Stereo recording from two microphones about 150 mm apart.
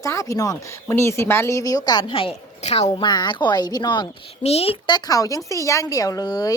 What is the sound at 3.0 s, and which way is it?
Speech, 30° left (ahead or behind).